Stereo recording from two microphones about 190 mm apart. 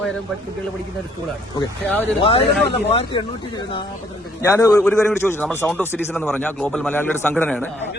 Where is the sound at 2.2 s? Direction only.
30° left (ahead or behind).